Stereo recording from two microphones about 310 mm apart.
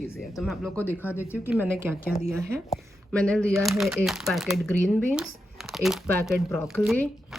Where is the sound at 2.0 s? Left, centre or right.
Left.